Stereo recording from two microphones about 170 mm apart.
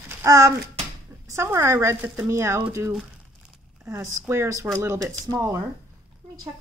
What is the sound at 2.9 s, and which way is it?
Crumpling, 5° right (ahead or behind).